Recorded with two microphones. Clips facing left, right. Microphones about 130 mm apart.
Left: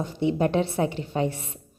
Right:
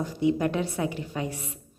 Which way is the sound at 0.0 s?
25° left (ahead or behind).